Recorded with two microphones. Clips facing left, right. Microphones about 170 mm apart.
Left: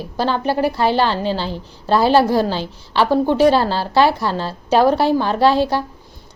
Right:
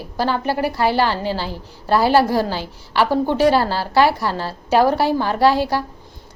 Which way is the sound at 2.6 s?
10° right (ahead or behind).